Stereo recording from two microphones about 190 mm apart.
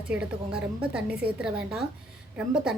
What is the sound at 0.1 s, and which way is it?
Speech, 5° right (ahead or behind).